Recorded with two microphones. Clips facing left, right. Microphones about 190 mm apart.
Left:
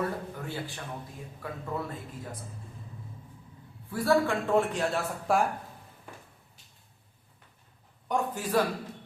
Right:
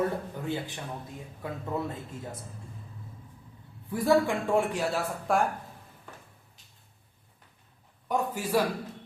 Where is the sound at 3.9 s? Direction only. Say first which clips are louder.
Right 1 dB; 15° right (ahead or behind); by 5.5 s centre (ahead or behind).